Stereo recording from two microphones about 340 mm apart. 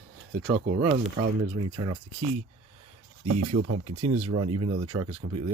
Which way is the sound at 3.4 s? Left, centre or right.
Right.